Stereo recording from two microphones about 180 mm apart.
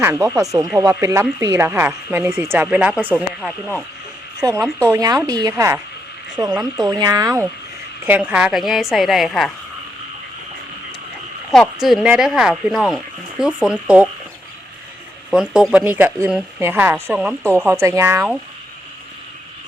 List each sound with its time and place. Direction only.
0.0 s speech: 10° right (ahead or behind)
4.4 s a woman's voice: 20° right (ahead or behind); by 9.5 s centre (ahead or behind)
11.5 s a woman's voice: centre (ahead or behind)
15.3 s speech: centre (ahead or behind)